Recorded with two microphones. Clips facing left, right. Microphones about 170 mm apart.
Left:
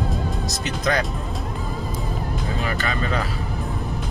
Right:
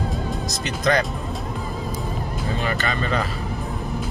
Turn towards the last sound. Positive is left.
turn(degrees=5)  # may be behind; listen again after turning